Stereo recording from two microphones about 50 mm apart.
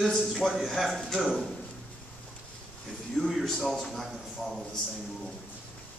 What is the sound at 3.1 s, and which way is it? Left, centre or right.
Speech, centre.